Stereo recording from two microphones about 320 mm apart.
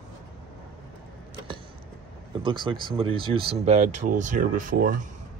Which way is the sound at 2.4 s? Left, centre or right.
Centre.